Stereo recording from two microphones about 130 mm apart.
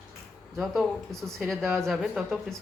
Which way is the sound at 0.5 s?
Centre (ahead or behind).